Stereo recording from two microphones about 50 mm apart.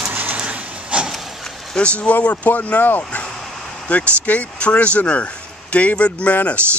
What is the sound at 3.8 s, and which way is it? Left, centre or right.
Speech, left.